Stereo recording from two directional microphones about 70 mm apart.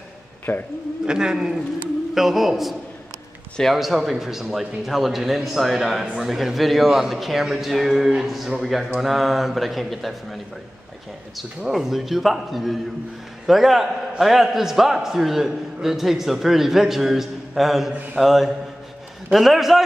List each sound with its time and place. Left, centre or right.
0.5 s speech: left
1.0 s a man's voice: centre